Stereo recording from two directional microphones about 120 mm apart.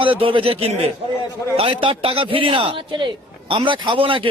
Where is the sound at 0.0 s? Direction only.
45° right (ahead or behind).